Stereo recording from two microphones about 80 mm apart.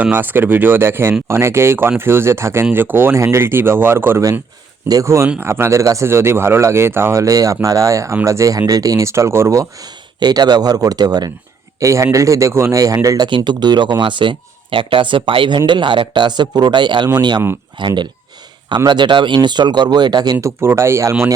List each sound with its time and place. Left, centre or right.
0.0 s speech: right
4.9 s speech: right
5.8 s speech: right
6.1 s speech: right
7.2 s speech: right
10.2 s speech: right
11.8 s speech: right
13.2 s speech: right
17.1 s speech: right
17.7 s speech: right
20.4 s speech: right